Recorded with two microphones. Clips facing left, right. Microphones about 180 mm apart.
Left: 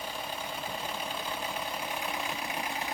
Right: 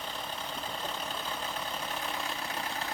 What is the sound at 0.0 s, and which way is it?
Vehicle, 10° left (ahead or behind).